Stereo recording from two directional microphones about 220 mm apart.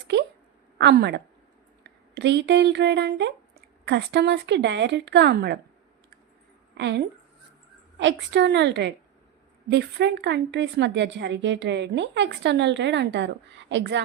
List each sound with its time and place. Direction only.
0.8 s a woman's voice: 50° right (ahead or behind)
6.7 s speech: 50° right (ahead or behind)